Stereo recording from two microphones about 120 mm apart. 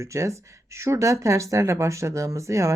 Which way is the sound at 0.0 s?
25° right (ahead or behind).